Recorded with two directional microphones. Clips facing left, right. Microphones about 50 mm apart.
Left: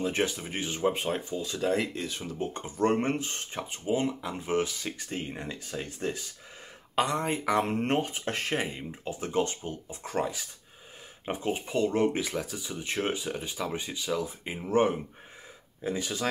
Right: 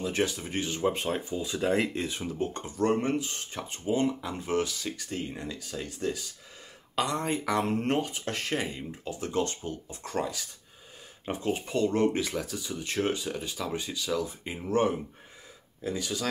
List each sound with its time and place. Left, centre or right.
0.0 s speech: left
1.3 s speech: centre
1.7 s speech: right
2.3 s speech: centre
2.6 s speech: left
3.7 s speech: centre; by 6.2 s left
7.2 s speech: centre
7.8 s speech: left